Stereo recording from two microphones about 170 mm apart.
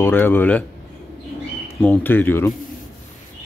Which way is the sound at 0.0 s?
10° left (ahead or behind).